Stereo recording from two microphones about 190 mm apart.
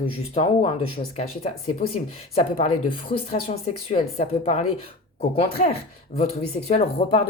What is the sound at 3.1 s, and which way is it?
Speech, 30° left (ahead or behind).